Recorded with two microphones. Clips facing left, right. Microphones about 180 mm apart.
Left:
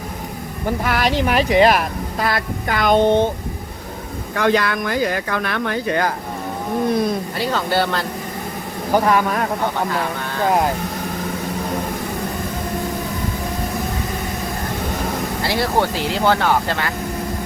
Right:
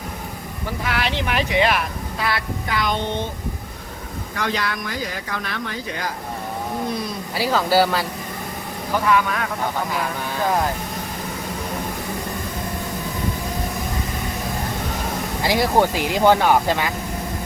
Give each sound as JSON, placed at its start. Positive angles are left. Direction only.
{"t": 0.9, "sound": "speech", "side_deg": 40}
{"t": 4.4, "sound": "speech", "side_deg": 55}
{"t": 7.3, "sound": "speech", "side_deg": -5}
{"t": 8.9, "sound": "speech", "side_deg": 45}
{"t": 15.4, "sound": "speech", "side_deg": -15}